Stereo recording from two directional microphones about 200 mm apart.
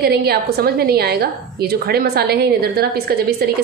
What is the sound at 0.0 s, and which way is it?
A woman's voice, 50° right (ahead or behind).